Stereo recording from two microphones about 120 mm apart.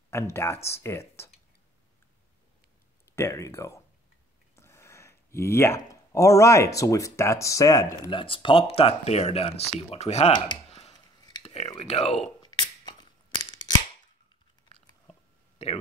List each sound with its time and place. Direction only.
0.1 s speech: 20° left (ahead or behind)
3.2 s speech: 25° left (ahead or behind)
8.1 s speech: 45° left (ahead or behind); by 10.3 s 65° left (ahead or behind)
10.3 s speech: 40° left (ahead or behind)
10.7 s chopping: 65° left (ahead or behind)
11.4 s a sound: 60° left (ahead or behind)
11.8 s speech: 60° left (ahead or behind)
15.6 s speech: 70° left (ahead or behind)